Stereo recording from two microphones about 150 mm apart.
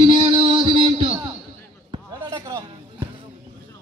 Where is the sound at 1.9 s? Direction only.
25° right (ahead or behind).